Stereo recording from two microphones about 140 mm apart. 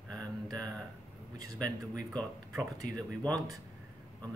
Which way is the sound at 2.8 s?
65° left (ahead or behind).